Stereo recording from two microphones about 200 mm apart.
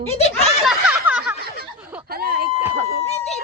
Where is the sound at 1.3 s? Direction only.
50° right (ahead or behind).